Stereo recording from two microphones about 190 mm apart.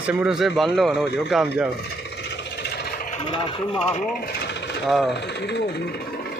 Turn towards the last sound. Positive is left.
turn(degrees=65)  # may be behind; listen again after turning